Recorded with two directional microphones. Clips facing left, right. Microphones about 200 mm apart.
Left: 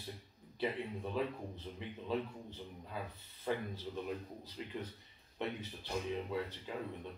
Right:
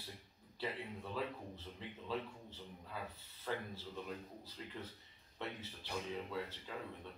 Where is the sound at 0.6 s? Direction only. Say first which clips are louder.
Left 6 dB; 20° left (ahead or behind).